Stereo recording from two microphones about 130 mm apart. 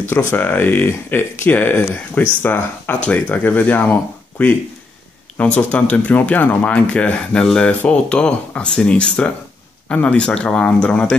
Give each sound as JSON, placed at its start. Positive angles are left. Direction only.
{"t": 0.3, "sound": "speech", "side_deg": 15}
{"t": 5.6, "sound": "speech", "side_deg": 10}